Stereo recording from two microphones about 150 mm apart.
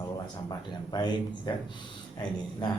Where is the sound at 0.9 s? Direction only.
30° left (ahead or behind).